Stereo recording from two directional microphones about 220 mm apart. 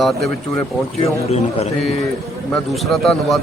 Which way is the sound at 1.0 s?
30° left (ahead or behind).